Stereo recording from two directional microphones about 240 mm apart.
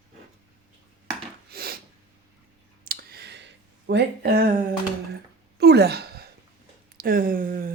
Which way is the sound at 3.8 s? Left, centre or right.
Right.